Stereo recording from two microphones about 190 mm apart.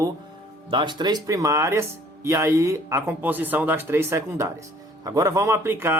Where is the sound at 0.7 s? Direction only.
25° right (ahead or behind).